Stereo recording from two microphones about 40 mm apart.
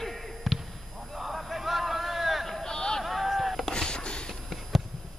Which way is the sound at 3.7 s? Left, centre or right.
Left.